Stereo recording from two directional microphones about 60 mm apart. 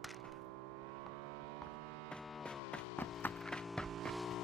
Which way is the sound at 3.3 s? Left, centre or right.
Centre.